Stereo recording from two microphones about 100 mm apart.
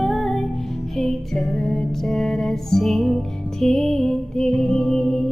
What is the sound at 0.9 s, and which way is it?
Music, 5° left (ahead or behind).